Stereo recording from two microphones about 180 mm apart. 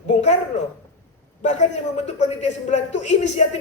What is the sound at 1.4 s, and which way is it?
A man's voice, 40° left (ahead or behind).